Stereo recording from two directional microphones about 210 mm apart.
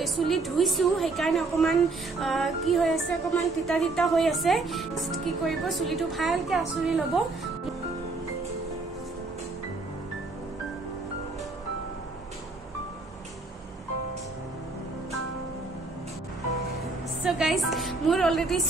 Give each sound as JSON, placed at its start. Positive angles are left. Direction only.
{"t": 0.0, "sound": "a woman's voice", "side_deg": 0}
{"t": 17.2, "sound": "music", "side_deg": 0}